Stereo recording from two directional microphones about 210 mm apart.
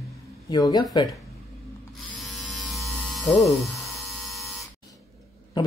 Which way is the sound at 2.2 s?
Centre (ahead or behind).